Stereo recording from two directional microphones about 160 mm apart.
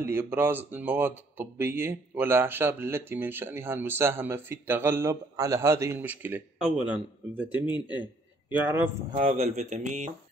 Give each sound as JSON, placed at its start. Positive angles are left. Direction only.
{"t": 0.0, "sound": "speech", "side_deg": -15}
{"t": 8.5, "sound": "speech", "side_deg": -10}
{"t": 9.3, "sound": "mantra", "side_deg": -45}